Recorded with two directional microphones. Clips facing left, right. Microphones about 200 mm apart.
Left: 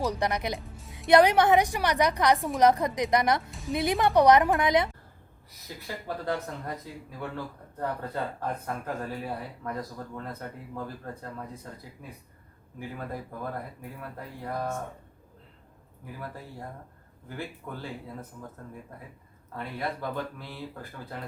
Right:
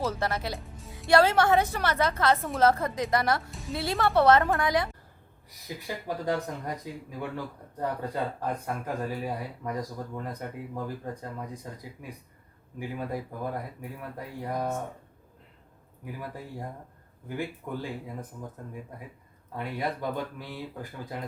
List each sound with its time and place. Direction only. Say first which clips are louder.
0.0 s a woman's voice: left 1 dB; 15° left (ahead or behind)
5.6 s speech: right 2 dB; 15° right (ahead or behind)
16.2 s speech: right 1 dB; 15° right (ahead or behind)
19.5 s speech: right 2 dB; 15° right (ahead or behind)